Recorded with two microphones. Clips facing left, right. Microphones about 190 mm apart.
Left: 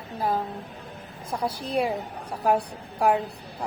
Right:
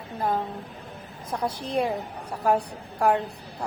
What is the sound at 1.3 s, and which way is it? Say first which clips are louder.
A woman's voice: even; 5° left (ahead or behind).